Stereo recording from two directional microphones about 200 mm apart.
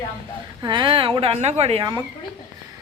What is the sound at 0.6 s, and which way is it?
A woman's voice, 25° right (ahead or behind).